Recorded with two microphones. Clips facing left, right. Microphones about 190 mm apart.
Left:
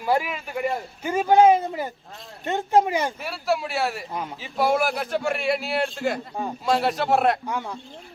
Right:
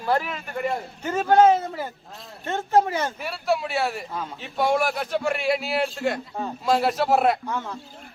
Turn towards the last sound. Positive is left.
turn(degrees=15)  # may be behind; listen again after turning